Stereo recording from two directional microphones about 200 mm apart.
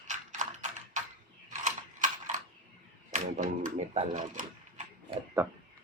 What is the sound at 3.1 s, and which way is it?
Speech, 40° right (ahead or behind).